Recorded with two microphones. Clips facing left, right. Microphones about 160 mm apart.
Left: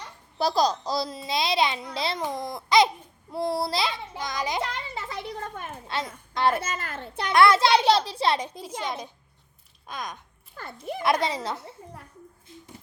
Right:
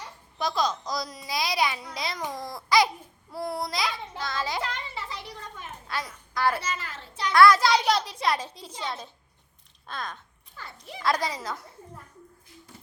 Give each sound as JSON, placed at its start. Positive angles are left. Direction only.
{"t": 0.3, "sound": "a child's voice", "side_deg": 35}
{"t": 4.0, "sound": "a child's voice", "side_deg": 15}
{"t": 4.9, "sound": "a sound", "side_deg": 50}
{"t": 5.9, "sound": "a child's voice", "side_deg": 25}
{"t": 6.6, "sound": "a child's voice", "side_deg": 50}
{"t": 7.3, "sound": "a child's voice", "side_deg": 25}
{"t": 8.8, "sound": "a child's voice", "side_deg": 15}
{"t": 10.6, "sound": "a child's voice", "side_deg": 50}
{"t": 11.0, "sound": "a child's voice", "side_deg": 25}